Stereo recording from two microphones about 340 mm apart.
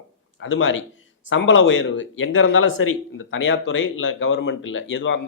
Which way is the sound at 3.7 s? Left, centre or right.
Left.